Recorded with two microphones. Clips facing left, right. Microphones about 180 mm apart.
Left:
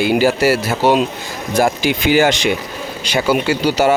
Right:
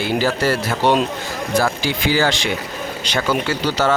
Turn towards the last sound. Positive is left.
turn(degrees=10)  # may be behind; listen again after turning